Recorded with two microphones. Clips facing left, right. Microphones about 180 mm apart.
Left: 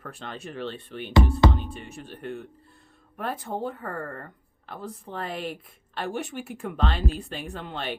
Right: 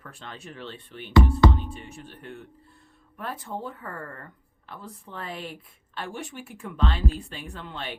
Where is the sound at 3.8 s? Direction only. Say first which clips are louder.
Left 4 dB; 40° left (ahead or behind).